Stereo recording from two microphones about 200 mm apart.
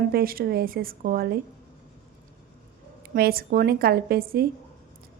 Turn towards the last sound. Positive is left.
turn(degrees=-50)  # may be behind; listen again after turning